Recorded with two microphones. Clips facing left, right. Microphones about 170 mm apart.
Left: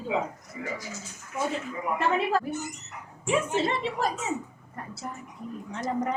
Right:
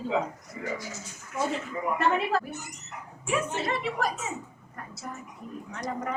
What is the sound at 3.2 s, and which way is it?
Speech, 25° left (ahead or behind).